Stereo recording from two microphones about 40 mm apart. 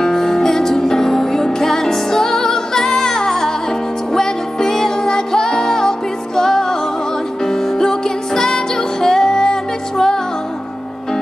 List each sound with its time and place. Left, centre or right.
0.0 s music: centre